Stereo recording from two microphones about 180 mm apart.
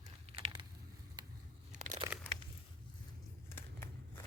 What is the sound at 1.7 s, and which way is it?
Crumpling, 45° right (ahead or behind).